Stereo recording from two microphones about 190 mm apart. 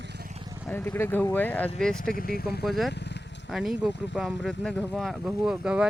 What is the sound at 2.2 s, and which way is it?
Speech, 50° left (ahead or behind).